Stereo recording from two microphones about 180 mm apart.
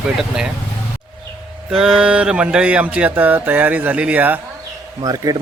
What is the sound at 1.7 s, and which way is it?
Speech, 5° right (ahead or behind).